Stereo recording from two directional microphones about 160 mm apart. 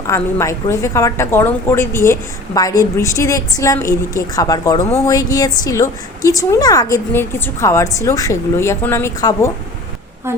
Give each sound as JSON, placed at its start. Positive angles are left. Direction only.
{"t": 0.1, "sound": "a woman's voice", "side_deg": 15}